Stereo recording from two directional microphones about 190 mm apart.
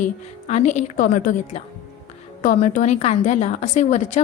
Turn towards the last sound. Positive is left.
turn(degrees=40)  # may be behind; listen again after turning